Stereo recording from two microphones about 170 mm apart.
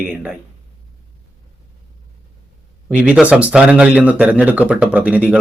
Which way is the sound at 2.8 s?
5° right (ahead or behind).